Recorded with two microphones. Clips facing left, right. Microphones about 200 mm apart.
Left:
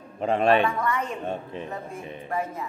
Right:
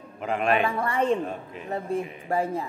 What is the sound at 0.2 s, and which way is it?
Speech, 30° left (ahead or behind).